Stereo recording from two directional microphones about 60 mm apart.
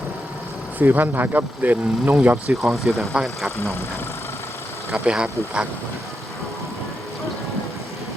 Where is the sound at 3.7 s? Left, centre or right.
Left.